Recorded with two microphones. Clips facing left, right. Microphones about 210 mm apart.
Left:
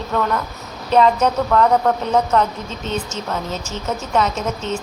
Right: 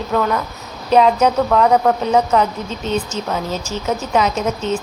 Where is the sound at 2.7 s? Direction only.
35° right (ahead or behind).